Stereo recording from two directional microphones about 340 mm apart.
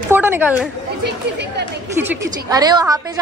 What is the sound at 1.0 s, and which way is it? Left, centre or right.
Speech, right.